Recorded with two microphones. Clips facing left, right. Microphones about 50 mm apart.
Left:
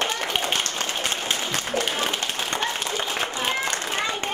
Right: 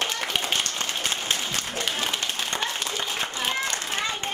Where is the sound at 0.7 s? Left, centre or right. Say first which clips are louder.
Left 2 dB; centre.